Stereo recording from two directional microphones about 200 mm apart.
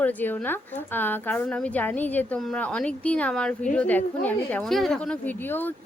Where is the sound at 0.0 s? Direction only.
10° left (ahead or behind).